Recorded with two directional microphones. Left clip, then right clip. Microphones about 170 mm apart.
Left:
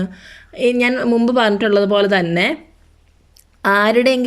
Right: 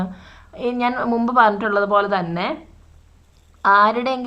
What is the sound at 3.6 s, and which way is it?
Speech, 15° left (ahead or behind).